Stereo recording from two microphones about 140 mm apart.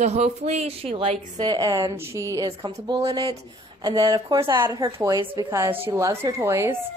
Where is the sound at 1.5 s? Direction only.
30° right (ahead or behind).